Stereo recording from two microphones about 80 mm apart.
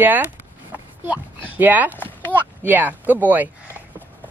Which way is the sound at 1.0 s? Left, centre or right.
Right.